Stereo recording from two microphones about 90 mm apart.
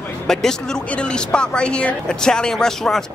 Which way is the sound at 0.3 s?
5° left (ahead or behind).